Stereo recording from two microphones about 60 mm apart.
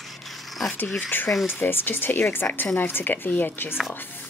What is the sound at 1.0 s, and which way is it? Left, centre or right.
Speech, left.